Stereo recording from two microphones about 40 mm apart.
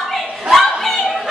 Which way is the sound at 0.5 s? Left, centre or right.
Centre.